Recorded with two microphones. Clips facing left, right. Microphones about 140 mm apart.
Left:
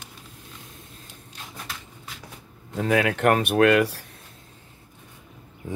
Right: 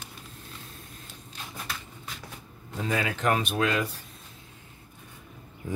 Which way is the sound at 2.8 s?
65° left (ahead or behind).